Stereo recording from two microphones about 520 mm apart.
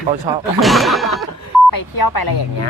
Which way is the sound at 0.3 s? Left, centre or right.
Centre.